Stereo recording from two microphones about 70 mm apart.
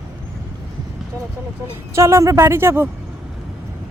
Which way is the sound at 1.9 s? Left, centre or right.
Right.